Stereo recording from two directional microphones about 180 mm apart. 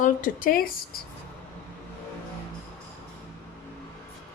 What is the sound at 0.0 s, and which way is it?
Speech, 50° left (ahead or behind).